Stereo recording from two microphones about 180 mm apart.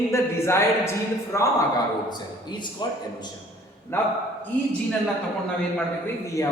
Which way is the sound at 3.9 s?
15° left (ahead or behind).